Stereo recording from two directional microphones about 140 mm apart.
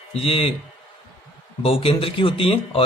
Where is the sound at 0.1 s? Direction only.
45° left (ahead or behind).